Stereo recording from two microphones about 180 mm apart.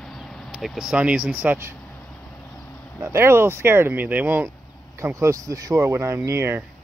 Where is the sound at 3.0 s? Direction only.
15° right (ahead or behind).